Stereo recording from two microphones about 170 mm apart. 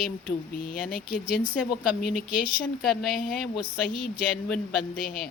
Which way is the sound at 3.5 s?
60° left (ahead or behind).